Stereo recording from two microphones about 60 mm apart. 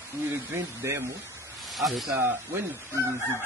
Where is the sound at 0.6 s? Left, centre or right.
Right.